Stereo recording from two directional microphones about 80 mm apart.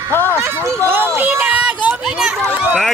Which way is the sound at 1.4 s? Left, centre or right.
Centre.